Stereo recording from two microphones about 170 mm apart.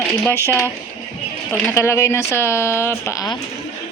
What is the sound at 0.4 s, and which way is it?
Speech, 15° left (ahead or behind).